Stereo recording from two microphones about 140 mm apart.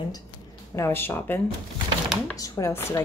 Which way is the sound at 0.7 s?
20° left (ahead or behind).